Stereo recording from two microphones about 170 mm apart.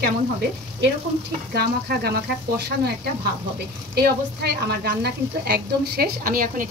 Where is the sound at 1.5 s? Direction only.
70° right (ahead or behind).